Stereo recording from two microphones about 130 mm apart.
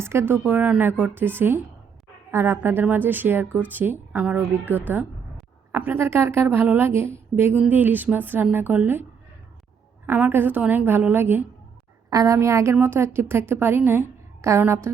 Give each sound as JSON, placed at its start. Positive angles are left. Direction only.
{"t": 0.0, "sound": "a woman's voice", "side_deg": -20}
{"t": 10.1, "sound": "a woman's voice", "side_deg": -15}